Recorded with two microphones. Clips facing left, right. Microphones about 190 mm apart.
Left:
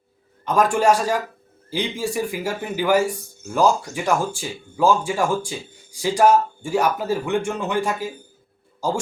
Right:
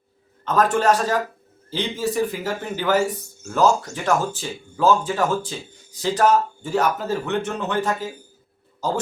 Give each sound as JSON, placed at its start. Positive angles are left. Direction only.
{"t": 0.4, "sound": "speech", "side_deg": 10}